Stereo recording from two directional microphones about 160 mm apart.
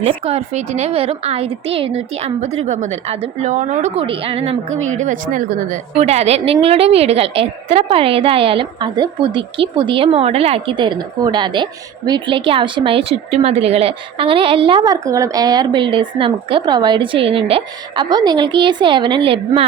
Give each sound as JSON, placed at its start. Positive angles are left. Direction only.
{"t": 0.0, "sound": "a woman's voice", "side_deg": -35}
{"t": 6.0, "sound": "a woman's voice", "side_deg": -40}